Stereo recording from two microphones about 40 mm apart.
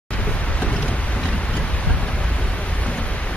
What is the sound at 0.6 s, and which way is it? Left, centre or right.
Boat, left.